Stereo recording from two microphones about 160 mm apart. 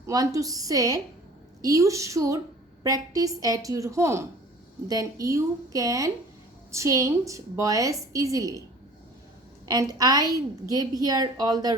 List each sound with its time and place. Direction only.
0.0 s a woman's voice: 20° right (ahead or behind)
9.6 s a woman's voice: 25° right (ahead or behind)